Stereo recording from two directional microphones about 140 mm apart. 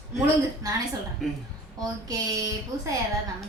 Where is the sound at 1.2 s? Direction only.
Centre (ahead or behind).